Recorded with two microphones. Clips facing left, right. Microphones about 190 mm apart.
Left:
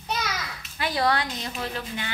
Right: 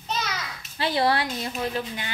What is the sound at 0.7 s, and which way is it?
Speech, 30° right (ahead or behind).